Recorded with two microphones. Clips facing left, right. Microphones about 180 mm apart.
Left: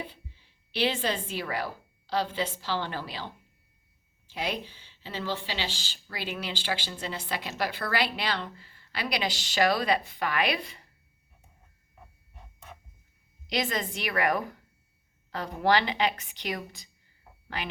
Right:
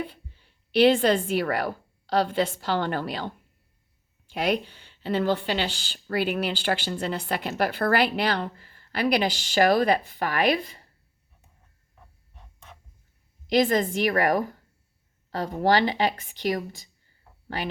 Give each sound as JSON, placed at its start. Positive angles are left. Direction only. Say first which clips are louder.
{"t": 0.0, "sound": "speech", "louder": "right 6 dB", "side_deg": -55}
{"t": 4.4, "sound": "speech", "louder": "right 8 dB", "side_deg": -55}
{"t": 13.5, "sound": "speech", "louder": "right 9 dB", "side_deg": -50}